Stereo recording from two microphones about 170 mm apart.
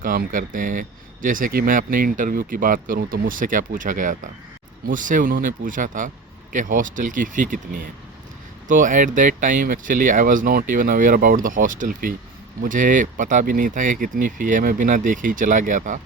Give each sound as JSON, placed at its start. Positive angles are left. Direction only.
{"t": 0.0, "sound": "speech", "side_deg": -55}